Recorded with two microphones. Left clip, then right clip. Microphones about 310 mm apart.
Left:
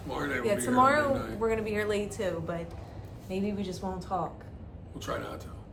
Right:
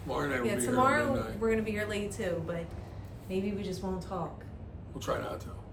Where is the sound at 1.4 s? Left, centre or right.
Centre.